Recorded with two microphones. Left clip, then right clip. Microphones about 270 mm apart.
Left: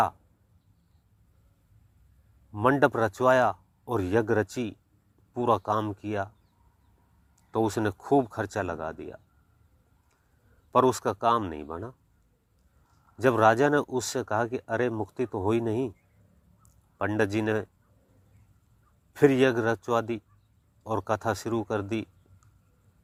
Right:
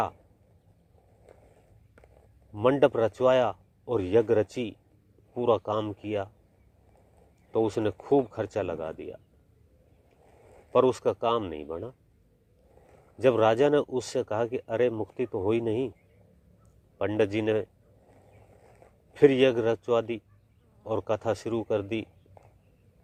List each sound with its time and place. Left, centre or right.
2.5 s speech: left
7.5 s speech: left
10.7 s speech: left
13.1 s speech: left
17.0 s speech: left
19.1 s speech: left